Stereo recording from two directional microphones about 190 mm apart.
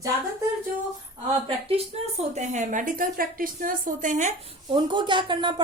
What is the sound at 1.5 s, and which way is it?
Speech, 30° right (ahead or behind).